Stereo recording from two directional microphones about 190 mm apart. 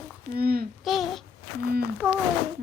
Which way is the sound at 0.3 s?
50° right (ahead or behind).